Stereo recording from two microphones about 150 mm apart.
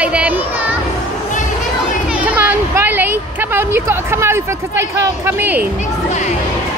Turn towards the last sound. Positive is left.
turn(degrees=-15)  # may be behind; listen again after turning